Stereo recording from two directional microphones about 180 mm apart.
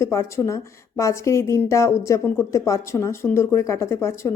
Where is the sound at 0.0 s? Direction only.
15° left (ahead or behind).